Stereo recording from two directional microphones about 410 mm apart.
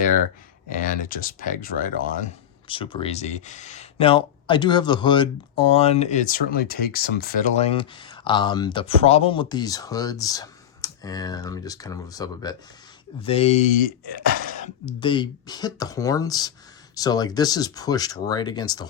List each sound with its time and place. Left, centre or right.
1.1 s speech: left
14.0 s speech: right
14.5 s speech: centre